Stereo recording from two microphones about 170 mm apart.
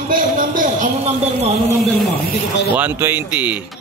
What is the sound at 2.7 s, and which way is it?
Speech, 10° right (ahead or behind).